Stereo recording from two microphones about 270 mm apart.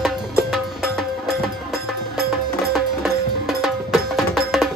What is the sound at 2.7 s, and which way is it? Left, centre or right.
Music, centre.